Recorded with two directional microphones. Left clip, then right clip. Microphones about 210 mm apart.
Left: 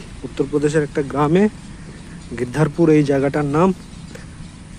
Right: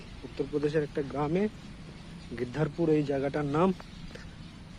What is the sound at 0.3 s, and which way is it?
Speech, 15° left (ahead or behind).